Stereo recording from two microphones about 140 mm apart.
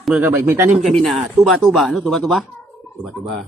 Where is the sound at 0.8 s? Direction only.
Centre (ahead or behind).